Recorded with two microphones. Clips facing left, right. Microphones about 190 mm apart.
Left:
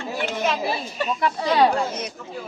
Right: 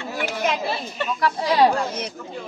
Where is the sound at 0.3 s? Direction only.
15° right (ahead or behind).